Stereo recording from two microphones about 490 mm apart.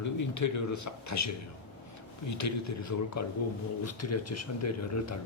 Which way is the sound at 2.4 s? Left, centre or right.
Left.